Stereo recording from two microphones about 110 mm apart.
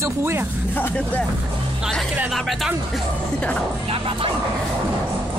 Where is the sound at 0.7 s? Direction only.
15° left (ahead or behind).